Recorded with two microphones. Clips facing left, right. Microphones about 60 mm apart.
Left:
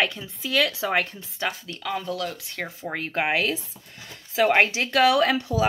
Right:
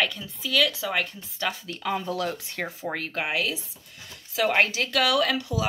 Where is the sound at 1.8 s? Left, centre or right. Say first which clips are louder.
Right 1 dB; centre.